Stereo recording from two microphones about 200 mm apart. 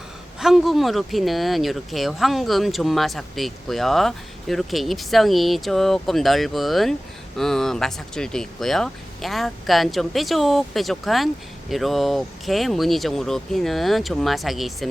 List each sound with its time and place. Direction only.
0.3 s speech: centre (ahead or behind)